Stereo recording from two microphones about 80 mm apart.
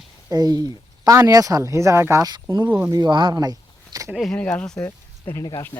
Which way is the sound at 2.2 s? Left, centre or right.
Right.